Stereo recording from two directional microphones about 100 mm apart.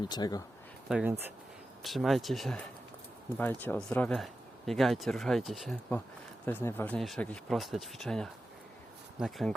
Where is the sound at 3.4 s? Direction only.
20° left (ahead or behind).